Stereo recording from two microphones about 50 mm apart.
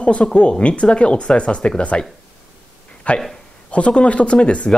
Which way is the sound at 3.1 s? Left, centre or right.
Left.